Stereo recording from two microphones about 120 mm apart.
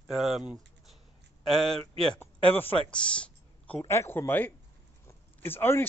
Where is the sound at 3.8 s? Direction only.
25° left (ahead or behind).